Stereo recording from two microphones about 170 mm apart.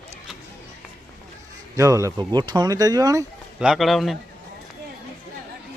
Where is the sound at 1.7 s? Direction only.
20° right (ahead or behind).